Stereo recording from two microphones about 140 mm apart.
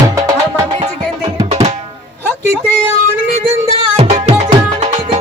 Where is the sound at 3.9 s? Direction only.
50° right (ahead or behind).